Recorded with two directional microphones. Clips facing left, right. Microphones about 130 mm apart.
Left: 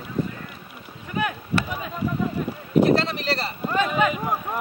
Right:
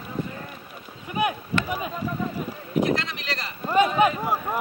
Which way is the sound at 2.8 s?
35° left (ahead or behind).